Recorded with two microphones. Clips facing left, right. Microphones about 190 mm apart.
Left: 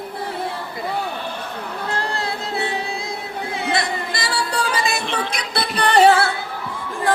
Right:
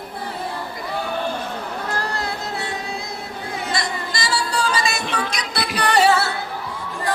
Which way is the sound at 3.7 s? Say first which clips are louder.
Left 3 dB; 60° left (ahead or behind).